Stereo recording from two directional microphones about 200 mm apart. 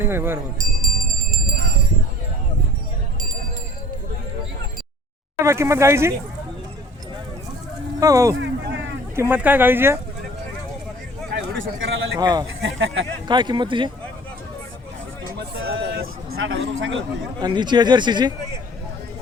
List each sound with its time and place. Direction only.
0.0 s music: 10° right (ahead or behind)
0.6 s music: 45° right (ahead or behind)
5.4 s speech: 15° right (ahead or behind)
7.9 s speech: 15° right (ahead or behind)
8.4 s a sound: 65° right (ahead or behind)
9.1 s speech: 10° right (ahead or behind)
11.3 s a sound: 70° right (ahead or behind)
12.2 s speech: 20° right (ahead or behind)
12.6 s speech: 70° right (ahead or behind)
13.2 s speech: 20° right (ahead or behind)
15.6 s vehicle: 50° right (ahead or behind)
16.5 s speech: 65° right (ahead or behind)
17.4 s speech: 20° right (ahead or behind)